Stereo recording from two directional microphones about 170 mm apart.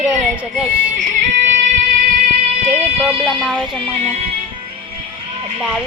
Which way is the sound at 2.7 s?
45° right (ahead or behind).